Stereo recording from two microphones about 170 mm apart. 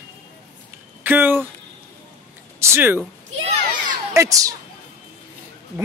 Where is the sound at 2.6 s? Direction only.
15° right (ahead or behind).